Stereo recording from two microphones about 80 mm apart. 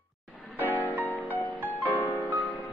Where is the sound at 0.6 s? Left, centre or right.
Left.